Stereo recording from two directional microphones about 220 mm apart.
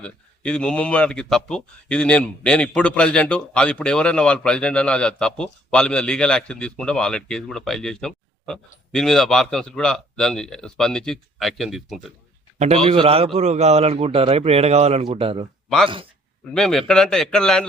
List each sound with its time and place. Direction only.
0.0 s speech: 5° left (ahead or behind)
12.5 s a man's voice: 25° right (ahead or behind)
16.6 s speech: centre (ahead or behind)